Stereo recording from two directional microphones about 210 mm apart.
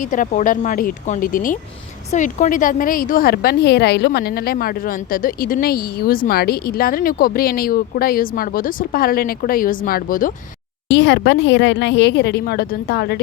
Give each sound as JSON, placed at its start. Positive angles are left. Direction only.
{"t": 0.0, "sound": "a woman's voice", "side_deg": 40}
{"t": 10.8, "sound": "a woman's voice", "side_deg": 60}